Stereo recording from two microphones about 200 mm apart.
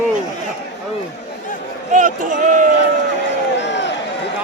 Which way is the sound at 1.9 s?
40° right (ahead or behind).